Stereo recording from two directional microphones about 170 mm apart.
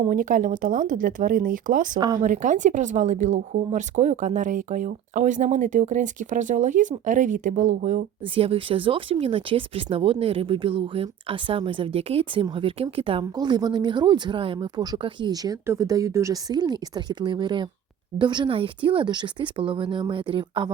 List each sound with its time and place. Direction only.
0.1 s speech: 50° right (ahead or behind)
2.0 s speech: 25° right (ahead or behind)
2.2 s speech: 50° right (ahead or behind)
8.2 s speech: 35° right (ahead or behind)